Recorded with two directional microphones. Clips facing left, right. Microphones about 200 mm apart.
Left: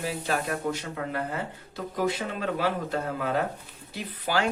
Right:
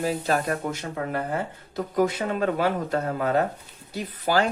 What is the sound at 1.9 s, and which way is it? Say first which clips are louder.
Speech: right 5 dB; 50° right (ahead or behind).